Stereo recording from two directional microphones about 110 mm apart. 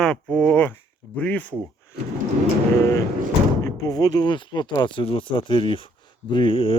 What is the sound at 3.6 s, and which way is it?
Speech, 35° left (ahead or behind).